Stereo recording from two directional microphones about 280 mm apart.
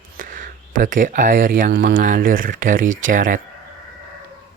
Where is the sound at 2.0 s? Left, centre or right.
Right.